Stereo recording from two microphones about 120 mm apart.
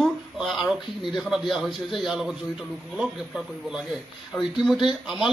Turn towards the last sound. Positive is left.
turn(degrees=-5)  # may be behind; listen again after turning